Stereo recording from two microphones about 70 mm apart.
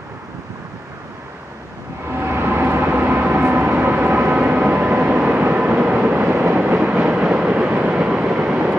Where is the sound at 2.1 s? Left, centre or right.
Right.